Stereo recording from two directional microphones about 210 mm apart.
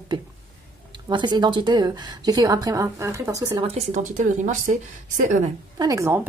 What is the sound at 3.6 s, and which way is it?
Speech, 30° right (ahead or behind).